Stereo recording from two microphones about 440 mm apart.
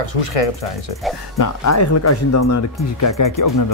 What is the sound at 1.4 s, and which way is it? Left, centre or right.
Speech, left.